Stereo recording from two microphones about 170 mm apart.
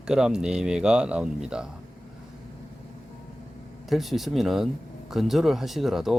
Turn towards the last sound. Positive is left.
turn(degrees=0)  # may be behind; listen again after turning